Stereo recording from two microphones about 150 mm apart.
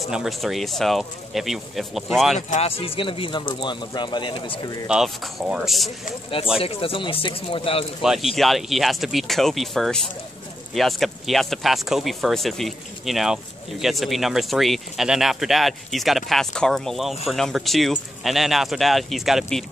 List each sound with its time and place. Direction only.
0.1 s speech: centre (ahead or behind)
2.3 s speech: 45° left (ahead or behind); by 4.8 s 30° left (ahead or behind)
4.8 s speech: 5° right (ahead or behind)
6.6 s speech: 40° left (ahead or behind)
8.0 s speech: centre (ahead or behind)